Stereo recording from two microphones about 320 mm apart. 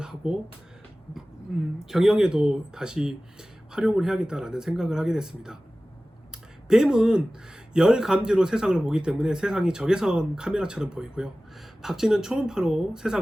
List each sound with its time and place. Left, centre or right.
0.0 s a sound: centre
1.8 s speech: centre
6.7 s speech: centre